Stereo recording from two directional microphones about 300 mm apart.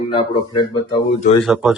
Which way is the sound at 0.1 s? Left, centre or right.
Centre.